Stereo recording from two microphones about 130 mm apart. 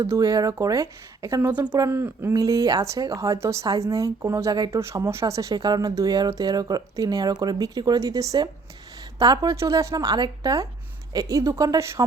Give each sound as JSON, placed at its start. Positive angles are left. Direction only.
{"t": 0.0, "sound": "speech", "side_deg": -30}
{"t": 1.4, "sound": "speech", "side_deg": -15}
{"t": 2.3, "sound": "speech", "side_deg": -30}